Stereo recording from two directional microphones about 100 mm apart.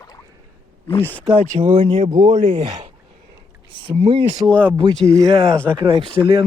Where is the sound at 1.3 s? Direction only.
90° right; by 2.9 s 55° right (ahead or behind).